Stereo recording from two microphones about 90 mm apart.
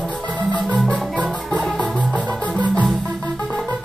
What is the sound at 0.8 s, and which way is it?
Music, 10° left (ahead or behind).